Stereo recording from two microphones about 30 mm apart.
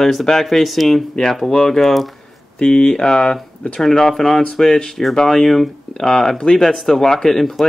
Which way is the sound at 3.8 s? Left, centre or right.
Centre.